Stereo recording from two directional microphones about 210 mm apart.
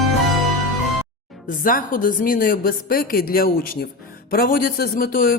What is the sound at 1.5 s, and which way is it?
Speech, 40° left (ahead or behind).